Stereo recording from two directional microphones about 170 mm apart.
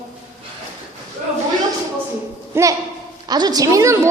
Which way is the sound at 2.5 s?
15° right (ahead or behind).